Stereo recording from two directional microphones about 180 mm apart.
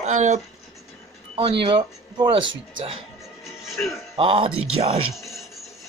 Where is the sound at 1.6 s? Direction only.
25° right (ahead or behind).